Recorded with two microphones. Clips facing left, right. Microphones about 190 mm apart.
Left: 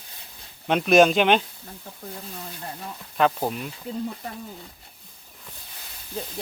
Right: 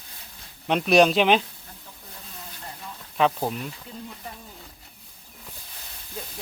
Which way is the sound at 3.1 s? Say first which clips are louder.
Left 1 dB; centre (ahead or behind).